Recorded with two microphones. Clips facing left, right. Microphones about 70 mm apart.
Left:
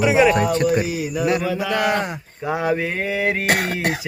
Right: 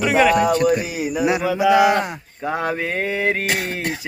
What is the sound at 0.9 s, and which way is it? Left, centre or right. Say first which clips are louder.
Mantra: even; right.